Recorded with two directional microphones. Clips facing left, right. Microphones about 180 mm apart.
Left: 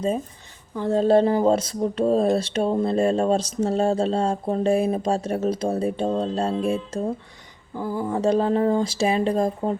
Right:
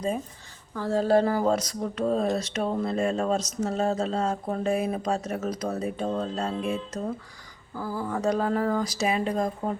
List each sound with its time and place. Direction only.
0.8 s speech: 20° left (ahead or behind)